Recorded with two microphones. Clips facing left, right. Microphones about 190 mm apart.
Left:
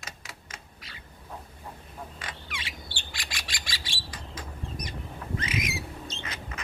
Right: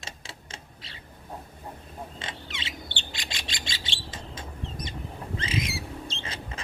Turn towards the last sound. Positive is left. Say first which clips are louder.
# right 1 dB
turn(degrees=-30)  # may be behind; listen again after turning